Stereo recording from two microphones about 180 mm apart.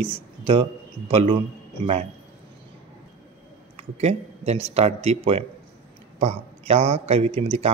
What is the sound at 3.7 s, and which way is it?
Speech, 35° right (ahead or behind).